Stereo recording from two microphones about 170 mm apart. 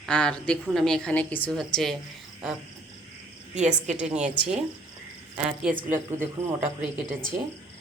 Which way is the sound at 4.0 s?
5° right (ahead or behind).